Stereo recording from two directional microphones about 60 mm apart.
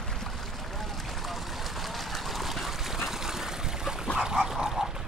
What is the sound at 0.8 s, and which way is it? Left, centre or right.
Vehicle, centre.